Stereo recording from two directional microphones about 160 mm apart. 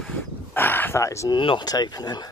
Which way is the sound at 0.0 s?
10° left (ahead or behind).